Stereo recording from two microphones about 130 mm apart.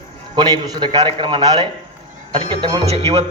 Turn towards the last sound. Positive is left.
turn(degrees=-50)  # may be behind; listen again after turning